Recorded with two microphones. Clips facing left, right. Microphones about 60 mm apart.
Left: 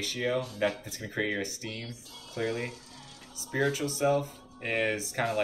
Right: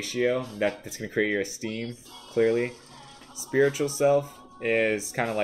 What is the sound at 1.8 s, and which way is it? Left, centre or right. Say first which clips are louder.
Speech: right 7 dB; right.